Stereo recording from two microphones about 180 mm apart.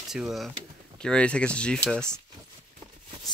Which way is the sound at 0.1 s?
Centre (ahead or behind).